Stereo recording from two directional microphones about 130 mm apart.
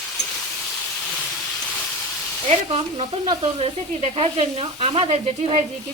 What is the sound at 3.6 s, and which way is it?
Sizzle, 45° right (ahead or behind).